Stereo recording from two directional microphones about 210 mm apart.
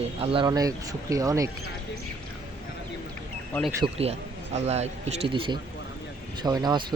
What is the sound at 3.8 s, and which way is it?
A man's voice, 30° right (ahead or behind).